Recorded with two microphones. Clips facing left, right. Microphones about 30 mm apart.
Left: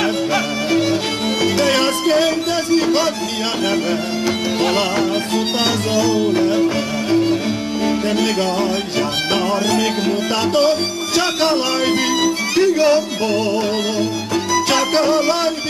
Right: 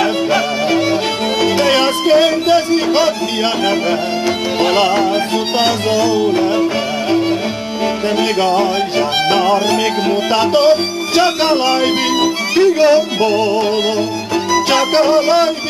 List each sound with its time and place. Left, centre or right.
0.0 s music: centre
4.6 s music: centre
11.1 s speech: right
14.5 s music: centre